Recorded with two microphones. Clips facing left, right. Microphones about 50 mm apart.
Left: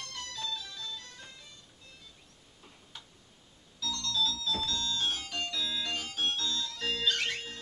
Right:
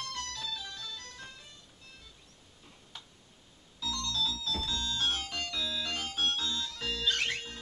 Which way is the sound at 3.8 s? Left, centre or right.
Centre.